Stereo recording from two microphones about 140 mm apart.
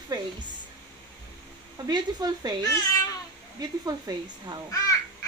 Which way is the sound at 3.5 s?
25° right (ahead or behind).